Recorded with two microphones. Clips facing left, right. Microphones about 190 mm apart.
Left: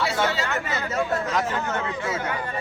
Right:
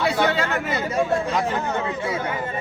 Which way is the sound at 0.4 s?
15° right (ahead or behind).